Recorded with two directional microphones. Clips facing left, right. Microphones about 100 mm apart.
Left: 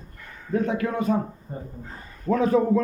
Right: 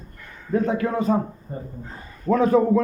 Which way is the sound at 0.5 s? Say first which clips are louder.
Right 3 dB; 35° right (ahead or behind).